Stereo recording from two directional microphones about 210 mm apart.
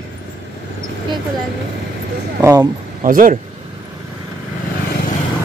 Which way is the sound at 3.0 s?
40° right (ahead or behind).